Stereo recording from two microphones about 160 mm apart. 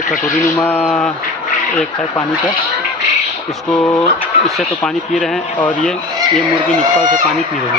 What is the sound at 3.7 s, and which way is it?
Speech, 10° left (ahead or behind).